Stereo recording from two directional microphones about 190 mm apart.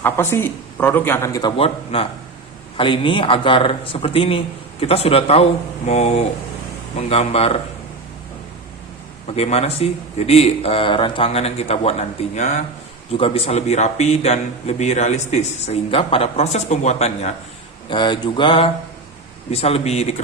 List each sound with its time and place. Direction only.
0.0 s a man's voice: 15° left (ahead or behind); by 7.6 s 30° left (ahead or behind)
9.2 s a man's voice: 30° left (ahead or behind)
17.8 s a man's voice: 25° left (ahead or behind)